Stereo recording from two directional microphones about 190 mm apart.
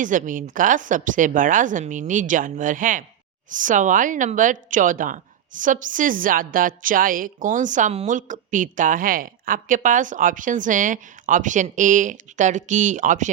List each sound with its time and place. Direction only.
0.0 s a woman's voice: 45° right (ahead or behind)